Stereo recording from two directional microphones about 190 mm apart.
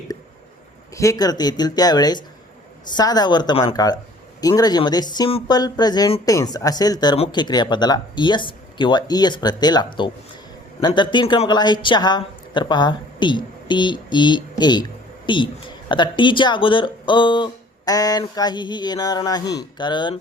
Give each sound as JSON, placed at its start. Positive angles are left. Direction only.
{"t": 0.9, "sound": "speech", "side_deg": 20}